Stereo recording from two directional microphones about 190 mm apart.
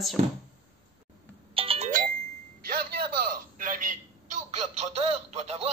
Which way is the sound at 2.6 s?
50° right (ahead or behind).